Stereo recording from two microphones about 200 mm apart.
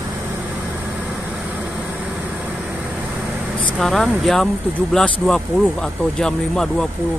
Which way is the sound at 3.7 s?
Centre (ahead or behind).